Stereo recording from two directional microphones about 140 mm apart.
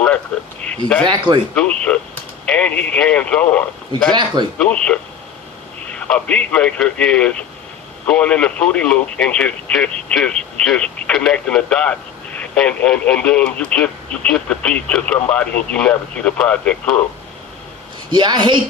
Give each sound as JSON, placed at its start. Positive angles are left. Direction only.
{"t": 0.6, "sound": "speech", "side_deg": 10}
{"t": 1.0, "sound": "a woman's voice", "side_deg": -30}
{"t": 1.5, "sound": "speech", "side_deg": 10}
{"t": 4.1, "sound": "a woman's voice", "side_deg": -30}
{"t": 4.5, "sound": "speech", "side_deg": 5}
{"t": 18.1, "sound": "a woman's voice", "side_deg": -30}